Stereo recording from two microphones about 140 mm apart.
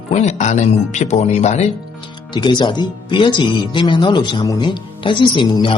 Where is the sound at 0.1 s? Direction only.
55° left (ahead or behind).